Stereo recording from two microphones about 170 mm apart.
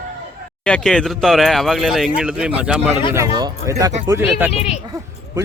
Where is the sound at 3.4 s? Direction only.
20° right (ahead or behind).